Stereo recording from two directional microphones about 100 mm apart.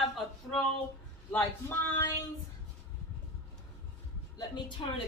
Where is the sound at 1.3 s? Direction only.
20° left (ahead or behind).